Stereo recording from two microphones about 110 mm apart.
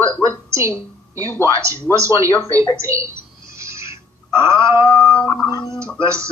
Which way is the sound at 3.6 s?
25° right (ahead or behind).